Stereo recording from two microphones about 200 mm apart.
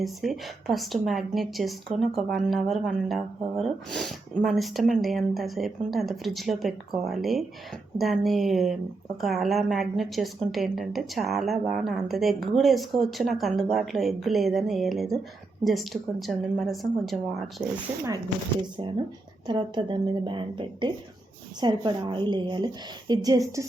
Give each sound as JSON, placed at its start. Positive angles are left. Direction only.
{"t": 0.0, "sound": "speech", "side_deg": 0}
{"t": 19.5, "sound": "a woman's voice", "side_deg": -25}